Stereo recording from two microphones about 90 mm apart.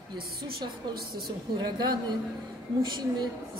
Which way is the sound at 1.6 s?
55° right (ahead or behind).